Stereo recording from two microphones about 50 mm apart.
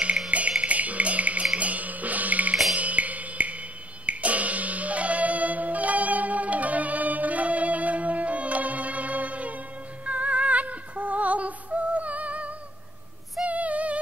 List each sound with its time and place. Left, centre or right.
0.3 s music: right
13.4 s female singing: right